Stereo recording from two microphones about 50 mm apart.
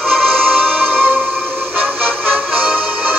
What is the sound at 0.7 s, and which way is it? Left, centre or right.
Music, right.